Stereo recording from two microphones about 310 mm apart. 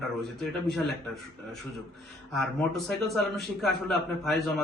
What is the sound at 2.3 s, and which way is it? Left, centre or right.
A man's voice, centre.